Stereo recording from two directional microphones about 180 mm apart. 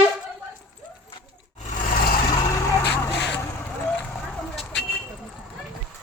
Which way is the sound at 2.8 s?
70° left (ahead or behind).